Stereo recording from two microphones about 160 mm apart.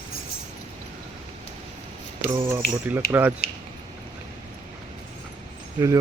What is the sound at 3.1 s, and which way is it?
Speech, 10° right (ahead or behind).